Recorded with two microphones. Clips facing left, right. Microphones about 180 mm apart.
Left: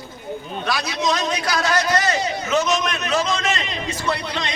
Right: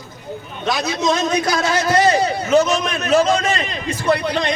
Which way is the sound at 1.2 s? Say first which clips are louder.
Right 5 dB; 45° right (ahead or behind).